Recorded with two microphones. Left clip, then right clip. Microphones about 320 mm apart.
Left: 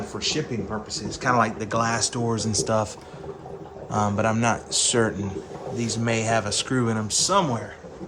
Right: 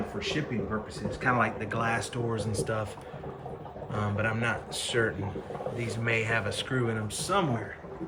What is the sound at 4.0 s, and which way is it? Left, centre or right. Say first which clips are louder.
Speech: left 8 dB; centre.